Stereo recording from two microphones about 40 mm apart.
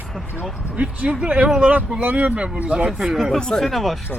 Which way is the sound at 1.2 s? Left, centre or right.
Right.